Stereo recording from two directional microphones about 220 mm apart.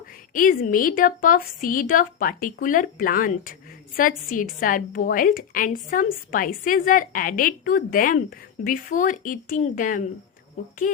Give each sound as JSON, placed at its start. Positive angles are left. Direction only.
{"t": 0.3, "sound": "a woman's voice", "side_deg": 40}